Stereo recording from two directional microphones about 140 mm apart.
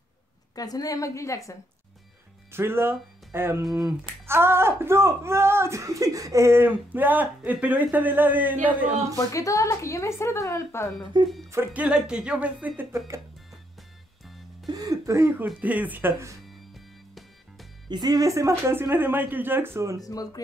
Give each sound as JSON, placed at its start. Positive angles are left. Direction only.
{"t": 0.6, "sound": "a woman's voice", "side_deg": 25}
{"t": 2.5, "sound": "speech", "side_deg": -15}
{"t": 9.1, "sound": "a woman's voice", "side_deg": 25}
{"t": 11.1, "sound": "speech", "side_deg": -30}
{"t": 11.5, "sound": "speech", "side_deg": -15}
{"t": 14.7, "sound": "speech", "side_deg": -25}
{"t": 16.7, "sound": "music", "side_deg": 0}
{"t": 17.8, "sound": "speech", "side_deg": -30}
{"t": 20.0, "sound": "a woman's voice", "side_deg": 25}